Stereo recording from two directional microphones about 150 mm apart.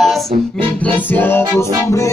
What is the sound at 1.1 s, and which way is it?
Music, 15° left (ahead or behind).